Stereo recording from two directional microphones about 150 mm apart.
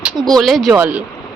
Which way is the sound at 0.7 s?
15° right (ahead or behind).